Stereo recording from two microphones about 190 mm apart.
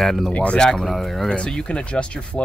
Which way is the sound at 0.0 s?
Centre (ahead or behind).